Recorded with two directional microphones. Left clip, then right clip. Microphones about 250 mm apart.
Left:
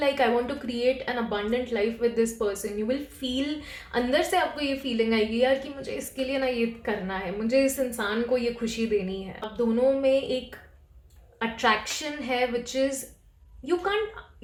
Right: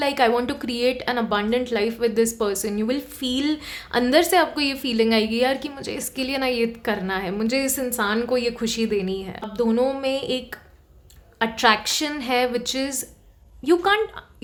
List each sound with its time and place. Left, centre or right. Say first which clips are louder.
0.0 s a woman's voice: right 4 dB; right